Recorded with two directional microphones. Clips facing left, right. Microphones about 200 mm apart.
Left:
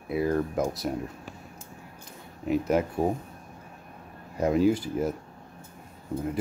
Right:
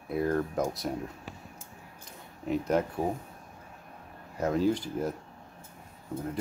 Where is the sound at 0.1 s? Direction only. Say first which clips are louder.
Left 2 dB; 5° left (ahead or behind).